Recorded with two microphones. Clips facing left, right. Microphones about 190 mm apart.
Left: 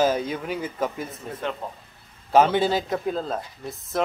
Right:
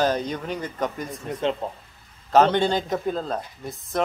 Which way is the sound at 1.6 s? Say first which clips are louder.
Right 4 dB; 25° right (ahead or behind).